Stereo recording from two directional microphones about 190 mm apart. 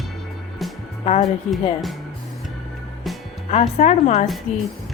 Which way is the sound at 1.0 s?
30° left (ahead or behind).